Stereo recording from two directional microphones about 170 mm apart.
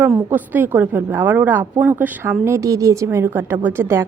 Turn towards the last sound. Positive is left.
turn(degrees=-15)  # may be behind; listen again after turning